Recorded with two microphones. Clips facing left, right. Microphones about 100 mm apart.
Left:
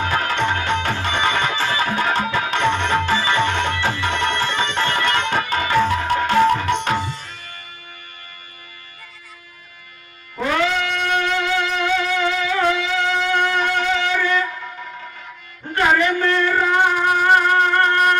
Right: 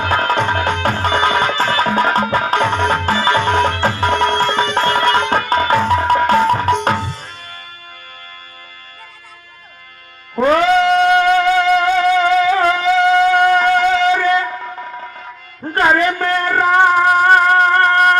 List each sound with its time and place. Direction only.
0.0 s music: 35° right (ahead or behind)
10.3 s music: 40° right (ahead or behind)
15.7 s music: 40° right (ahead or behind)